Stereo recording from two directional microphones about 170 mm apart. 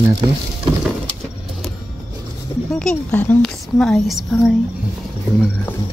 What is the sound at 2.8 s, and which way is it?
A woman's voice, 5° left (ahead or behind).